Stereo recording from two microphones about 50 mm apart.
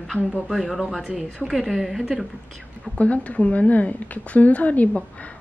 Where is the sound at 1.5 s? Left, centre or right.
Centre.